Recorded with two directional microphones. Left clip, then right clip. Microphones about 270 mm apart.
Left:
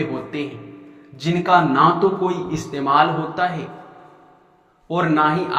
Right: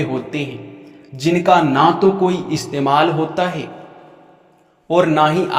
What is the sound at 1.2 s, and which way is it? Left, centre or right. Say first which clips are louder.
A man's voice: right 3 dB; right.